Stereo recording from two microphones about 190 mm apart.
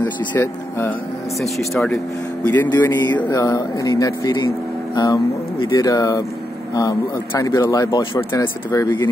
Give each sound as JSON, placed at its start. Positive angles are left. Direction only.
{"t": 0.0, "sound": "speech", "side_deg": 10}
{"t": 1.4, "sound": "speech", "side_deg": 0}